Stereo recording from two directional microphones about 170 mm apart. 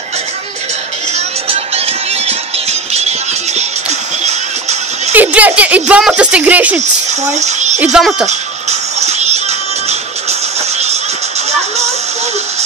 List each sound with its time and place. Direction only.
2.9 s music: 40° right (ahead or behind)
5.1 s speech: 10° right (ahead or behind)
7.3 s a child's voice: 45° right (ahead or behind)
7.8 s a child's voice: 5° right (ahead or behind)
8.3 s music: 40° right (ahead or behind)